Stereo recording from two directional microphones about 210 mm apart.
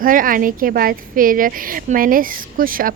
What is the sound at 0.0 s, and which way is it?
A woman's voice, 40° right (ahead or behind).